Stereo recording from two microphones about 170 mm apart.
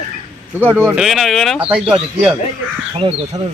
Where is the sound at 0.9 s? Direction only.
Centre (ahead or behind).